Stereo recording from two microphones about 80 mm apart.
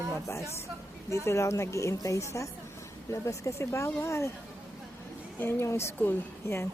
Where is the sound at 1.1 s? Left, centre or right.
Left.